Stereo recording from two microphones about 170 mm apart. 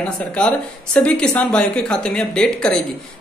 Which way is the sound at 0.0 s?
5° left (ahead or behind).